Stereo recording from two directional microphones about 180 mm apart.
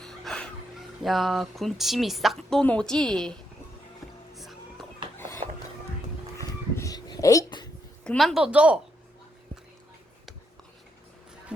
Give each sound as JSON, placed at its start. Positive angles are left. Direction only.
{"t": 0.0, "sound": "speech", "side_deg": 5}
{"t": 4.4, "sound": "music", "side_deg": 0}
{"t": 5.1, "sound": "a sound", "side_deg": 15}
{"t": 8.0, "sound": "a woman's voice", "side_deg": 5}